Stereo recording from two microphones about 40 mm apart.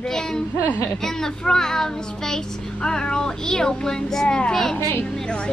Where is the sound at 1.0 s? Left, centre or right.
Centre.